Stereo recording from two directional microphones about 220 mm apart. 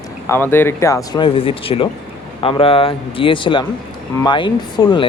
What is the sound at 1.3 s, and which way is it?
Speech, 25° left (ahead or behind).